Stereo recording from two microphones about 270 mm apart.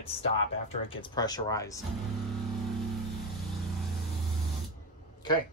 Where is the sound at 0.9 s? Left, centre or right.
Centre.